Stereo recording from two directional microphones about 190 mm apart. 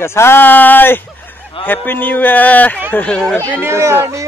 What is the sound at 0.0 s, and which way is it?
A man's voice, 15° left (ahead or behind).